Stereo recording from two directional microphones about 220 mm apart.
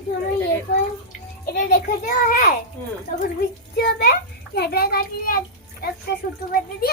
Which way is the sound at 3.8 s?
50° left (ahead or behind).